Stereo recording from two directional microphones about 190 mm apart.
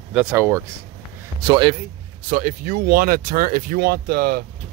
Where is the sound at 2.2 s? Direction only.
45° right (ahead or behind).